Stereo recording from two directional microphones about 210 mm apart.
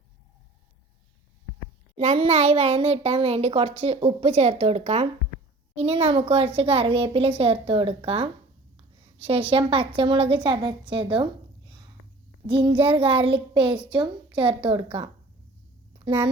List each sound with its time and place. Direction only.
2.0 s a child's voice: 30° right (ahead or behind)